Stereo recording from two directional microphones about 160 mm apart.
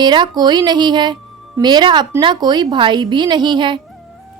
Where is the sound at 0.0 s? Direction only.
25° right (ahead or behind).